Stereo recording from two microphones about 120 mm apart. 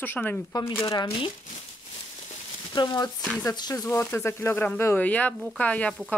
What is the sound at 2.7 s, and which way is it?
Speech, 35° left (ahead or behind).